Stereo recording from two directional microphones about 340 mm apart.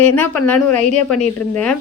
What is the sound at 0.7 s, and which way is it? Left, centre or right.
Speech, right.